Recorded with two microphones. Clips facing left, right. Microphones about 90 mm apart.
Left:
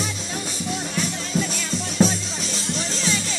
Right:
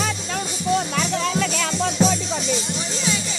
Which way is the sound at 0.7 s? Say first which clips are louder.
Right 6 dB; 80° right.